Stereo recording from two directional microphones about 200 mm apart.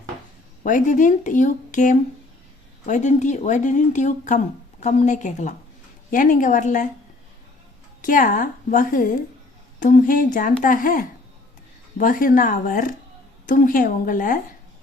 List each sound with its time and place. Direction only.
0.6 s speech: 40° left (ahead or behind)
8.0 s speech: 40° left (ahead or behind)